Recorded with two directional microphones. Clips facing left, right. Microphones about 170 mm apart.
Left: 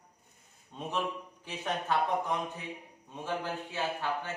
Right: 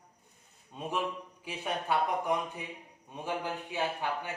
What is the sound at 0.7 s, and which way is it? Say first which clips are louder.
Speech: even; 5° right (ahead or behind).